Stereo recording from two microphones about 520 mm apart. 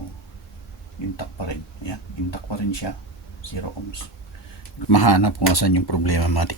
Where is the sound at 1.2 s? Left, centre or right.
Left.